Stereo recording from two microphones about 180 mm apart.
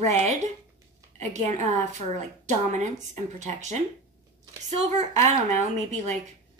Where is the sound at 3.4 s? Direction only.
40° right (ahead or behind).